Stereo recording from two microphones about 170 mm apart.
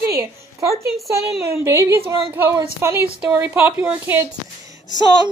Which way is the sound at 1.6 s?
15° right (ahead or behind).